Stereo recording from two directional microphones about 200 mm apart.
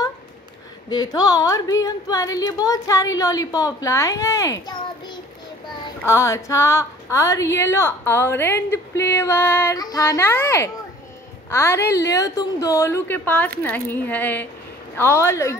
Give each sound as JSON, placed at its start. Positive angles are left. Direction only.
{"t": 0.8, "sound": "a woman's voice", "side_deg": 20}